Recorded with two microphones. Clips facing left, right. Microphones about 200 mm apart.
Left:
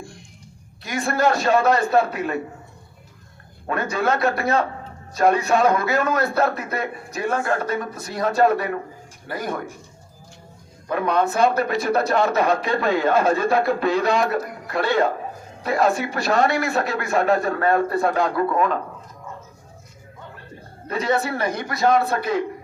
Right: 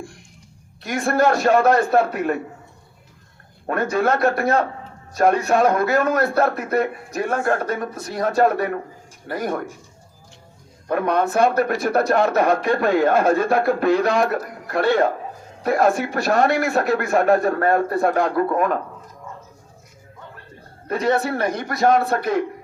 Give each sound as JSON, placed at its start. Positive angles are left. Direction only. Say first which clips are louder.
{"t": 0.8, "sound": "speech", "louder": "right 3 dB", "side_deg": -50}
{"t": 3.7, "sound": "speech", "louder": "right 3 dB", "side_deg": -50}
{"t": 10.8, "sound": "speech", "louder": "right 1 dB", "side_deg": -50}
{"t": 20.8, "sound": "speech", "louder": "right 2 dB", "side_deg": -50}